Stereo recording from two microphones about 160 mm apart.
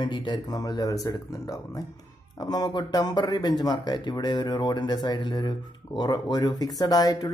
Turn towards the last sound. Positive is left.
turn(degrees=25)  # may be behind; listen again after turning